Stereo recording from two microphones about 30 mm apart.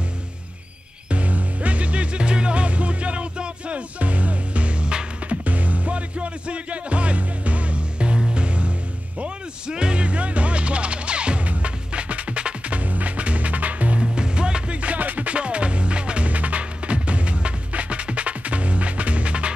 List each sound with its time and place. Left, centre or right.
1.1 s music: right
5.3 s music: right
12.4 s music: right
12.7 s music: right
14.0 s music: right
14.8 s music: right
15.3 s music: right
16.3 s music: right